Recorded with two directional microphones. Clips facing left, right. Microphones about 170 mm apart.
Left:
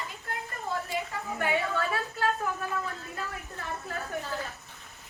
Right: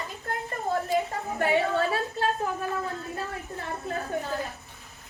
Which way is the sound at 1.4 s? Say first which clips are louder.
Right 5 dB; 30° right (ahead or behind).